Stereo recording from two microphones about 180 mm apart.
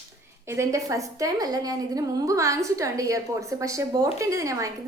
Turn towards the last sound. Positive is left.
turn(degrees=-15)  # may be behind; listen again after turning